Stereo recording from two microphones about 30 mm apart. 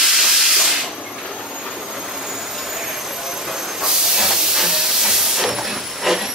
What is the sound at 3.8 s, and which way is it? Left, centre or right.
Hiss, centre.